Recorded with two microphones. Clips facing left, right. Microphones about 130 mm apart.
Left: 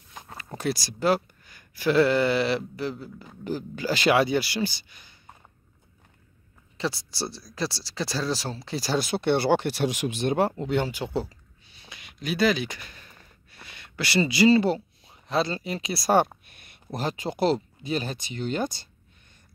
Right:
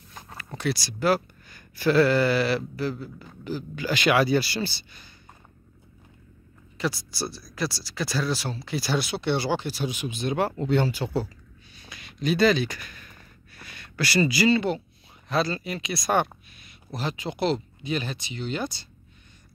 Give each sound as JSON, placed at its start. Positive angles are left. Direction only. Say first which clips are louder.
{"t": 0.6, "sound": "speech", "louder": "even", "side_deg": 40}
{"t": 1.5, "sound": "speech", "louder": "right 1 dB", "side_deg": 15}
{"t": 3.7, "sound": "speech", "louder": "even", "side_deg": 35}
{"t": 6.8, "sound": "speech", "louder": "right 1 dB", "side_deg": 30}
{"t": 10.5, "sound": "speech", "louder": "right 2 dB", "side_deg": 15}
{"t": 11.2, "sound": "a sound", "louder": "right 4 dB", "side_deg": 25}
{"t": 12.2, "sound": "speech", "louder": "right 3 dB", "side_deg": 10}
{"t": 16.4, "sound": "speech", "louder": "left 3 dB", "side_deg": 55}